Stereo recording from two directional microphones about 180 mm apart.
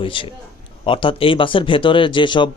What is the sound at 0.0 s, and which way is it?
A man's voice, 30° left (ahead or behind).